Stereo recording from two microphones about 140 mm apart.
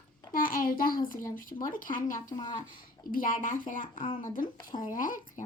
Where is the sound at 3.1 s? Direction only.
75° left (ahead or behind).